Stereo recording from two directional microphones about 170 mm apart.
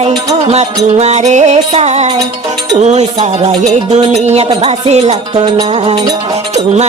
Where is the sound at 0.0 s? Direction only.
25° right (ahead or behind).